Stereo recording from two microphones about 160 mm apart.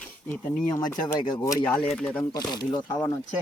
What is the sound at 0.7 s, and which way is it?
Speech, 25° left (ahead or behind).